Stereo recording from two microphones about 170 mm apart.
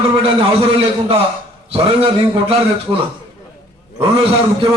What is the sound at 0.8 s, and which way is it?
A man's voice, 35° right (ahead or behind).